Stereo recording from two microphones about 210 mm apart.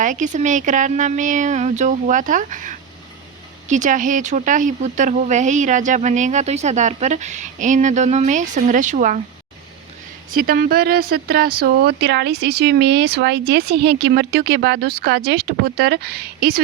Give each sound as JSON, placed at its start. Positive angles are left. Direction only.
{"t": 0.0, "sound": "speech", "side_deg": -35}
{"t": 10.3, "sound": "speech", "side_deg": -45}